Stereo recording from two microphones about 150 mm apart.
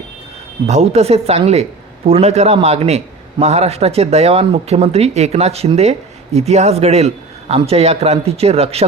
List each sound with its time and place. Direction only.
0.7 s a man's voice: 45° right (ahead or behind)